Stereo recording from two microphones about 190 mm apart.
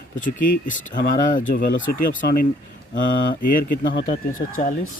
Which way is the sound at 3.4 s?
45° left (ahead or behind).